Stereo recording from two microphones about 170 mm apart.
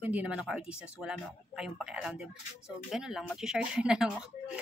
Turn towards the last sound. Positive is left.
turn(degrees=-5)  # may be behind; listen again after turning